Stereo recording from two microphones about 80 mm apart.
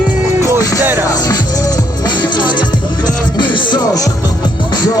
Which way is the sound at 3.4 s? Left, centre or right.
Left.